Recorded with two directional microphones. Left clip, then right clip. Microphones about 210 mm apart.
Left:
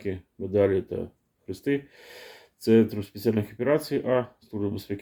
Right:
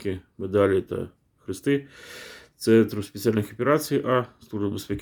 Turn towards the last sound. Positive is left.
turn(degrees=-25)  # may be behind; listen again after turning